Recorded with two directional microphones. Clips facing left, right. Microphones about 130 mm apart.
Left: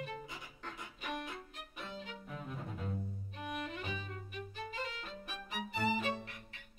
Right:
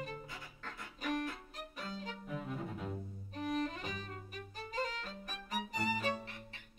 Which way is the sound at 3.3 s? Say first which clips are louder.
Right 6 dB; 40° right (ahead or behind).